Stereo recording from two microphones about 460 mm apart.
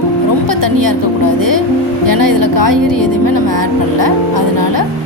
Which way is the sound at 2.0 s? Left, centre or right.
Right.